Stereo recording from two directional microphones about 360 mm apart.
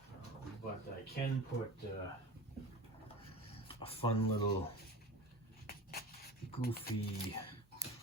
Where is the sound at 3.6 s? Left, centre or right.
Centre.